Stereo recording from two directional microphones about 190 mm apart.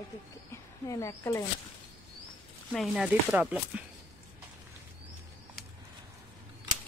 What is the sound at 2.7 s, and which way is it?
A woman's voice, centre (ahead or behind).